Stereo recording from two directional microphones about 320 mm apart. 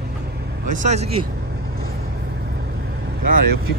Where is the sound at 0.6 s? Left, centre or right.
Right.